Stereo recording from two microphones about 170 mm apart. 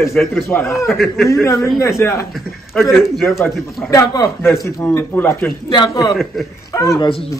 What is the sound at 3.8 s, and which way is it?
A man's voice, 20° left (ahead or behind).